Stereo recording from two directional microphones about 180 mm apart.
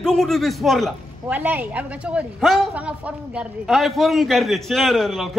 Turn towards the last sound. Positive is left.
turn(degrees=0)  # may be behind; listen again after turning